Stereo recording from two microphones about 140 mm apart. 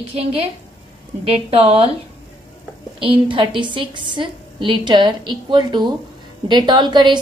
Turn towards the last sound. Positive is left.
turn(degrees=-35)  # may be behind; listen again after turning